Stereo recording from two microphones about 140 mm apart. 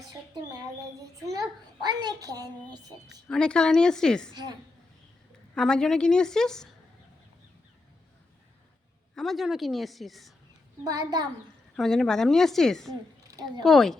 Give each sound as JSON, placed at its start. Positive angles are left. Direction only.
{"t": 0.5, "sound": "a sound", "side_deg": -25}
{"t": 3.2, "sound": "a woman's voice", "side_deg": 5}
{"t": 5.5, "sound": "a woman's voice", "side_deg": 5}
{"t": 9.1, "sound": "a woman's voice", "side_deg": 0}
{"t": 10.8, "sound": "a child's voice", "side_deg": -30}
{"t": 11.8, "sound": "a woman's voice", "side_deg": 0}
{"t": 13.2, "sound": "a sound", "side_deg": -25}
{"t": 13.7, "sound": "a woman's voice", "side_deg": 0}